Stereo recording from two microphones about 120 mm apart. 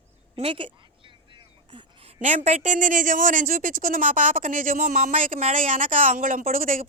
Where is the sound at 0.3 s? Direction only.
50° right (ahead or behind).